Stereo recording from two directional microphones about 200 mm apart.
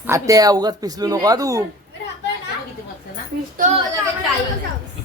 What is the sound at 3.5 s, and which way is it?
Speech, 35° right (ahead or behind).